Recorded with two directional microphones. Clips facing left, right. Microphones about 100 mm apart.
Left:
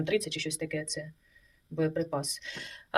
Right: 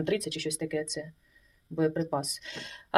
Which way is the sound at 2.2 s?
55° right (ahead or behind).